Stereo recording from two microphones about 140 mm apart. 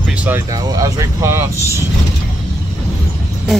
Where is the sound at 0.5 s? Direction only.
25° right (ahead or behind).